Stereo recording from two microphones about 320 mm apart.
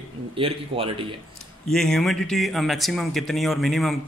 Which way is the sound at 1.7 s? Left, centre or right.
Centre.